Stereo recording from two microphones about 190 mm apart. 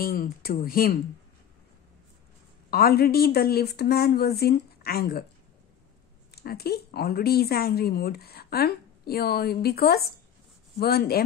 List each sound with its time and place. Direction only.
0.0 s speech: 50° left (ahead or behind)
2.7 s speech: 55° left (ahead or behind)
6.3 s speech: 55° left (ahead or behind)